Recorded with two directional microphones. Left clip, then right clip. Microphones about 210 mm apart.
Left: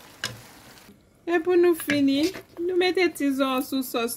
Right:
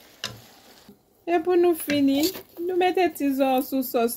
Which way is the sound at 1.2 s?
25° left (ahead or behind).